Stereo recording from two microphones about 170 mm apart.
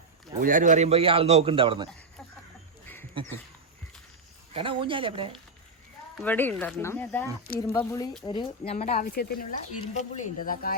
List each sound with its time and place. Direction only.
0.3 s a man's voice: 50° right (ahead or behind); by 1.9 s 30° right (ahead or behind)
2.8 s a sound: 10° left (ahead or behind)
4.5 s a man's voice: 30° right (ahead or behind)
6.2 s speech: 10° left (ahead or behind)
8.2 s speech: 25° left (ahead or behind)
8.7 s speech: 40° left (ahead or behind)
9.0 s speech: 60° left (ahead or behind)
9.8 s speech: 45° left (ahead or behind)